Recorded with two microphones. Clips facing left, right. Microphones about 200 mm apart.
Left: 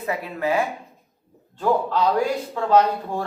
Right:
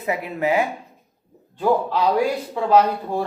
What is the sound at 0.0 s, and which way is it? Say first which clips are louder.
Speech: right 2 dB; 20° right (ahead or behind).